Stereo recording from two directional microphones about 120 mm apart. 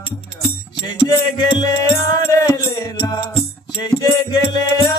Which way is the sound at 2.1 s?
30° left (ahead or behind).